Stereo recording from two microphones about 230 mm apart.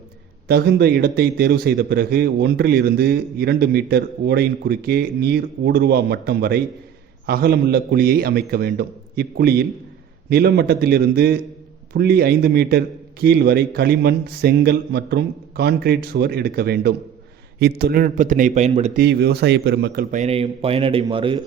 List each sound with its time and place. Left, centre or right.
0.4 s a man's voice: right
18.9 s a man's voice: right